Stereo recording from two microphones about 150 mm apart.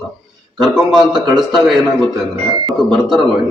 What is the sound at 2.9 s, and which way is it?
Speech, centre (ahead or behind).